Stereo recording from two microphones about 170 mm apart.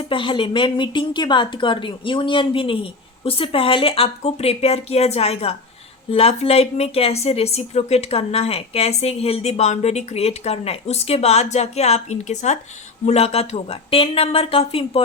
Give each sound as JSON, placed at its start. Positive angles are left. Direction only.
{"t": 0.1, "sound": "speech", "side_deg": 30}